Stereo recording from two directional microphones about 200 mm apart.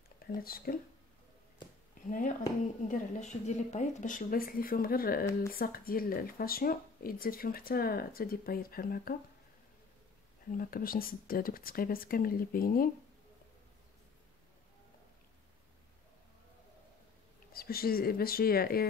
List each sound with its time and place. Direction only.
0.4 s speech: 50° left (ahead or behind)
2.0 s speech: 40° left (ahead or behind)
10.5 s speech: 45° left (ahead or behind)
17.5 s speech: 50° left (ahead or behind)